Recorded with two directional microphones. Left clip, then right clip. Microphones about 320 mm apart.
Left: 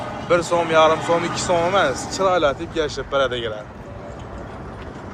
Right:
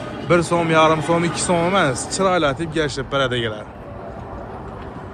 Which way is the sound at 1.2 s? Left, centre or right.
Right.